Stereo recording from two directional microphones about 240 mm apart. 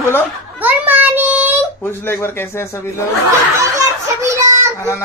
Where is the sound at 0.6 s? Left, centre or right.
Centre.